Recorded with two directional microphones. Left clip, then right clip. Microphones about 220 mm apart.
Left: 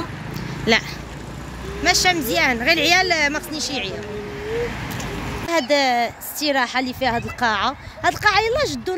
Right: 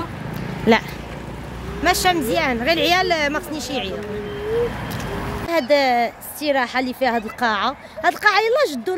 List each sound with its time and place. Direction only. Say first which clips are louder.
0.7 s speech: right 2 dB; 30° right (ahead or behind)
2.2 s a woman's voice: left 1 dB; 10° right (ahead or behind)
5.5 s speech: right 1 dB; centre (ahead or behind)